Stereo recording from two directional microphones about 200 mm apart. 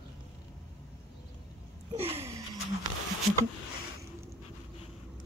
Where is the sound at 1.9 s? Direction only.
30° right (ahead or behind).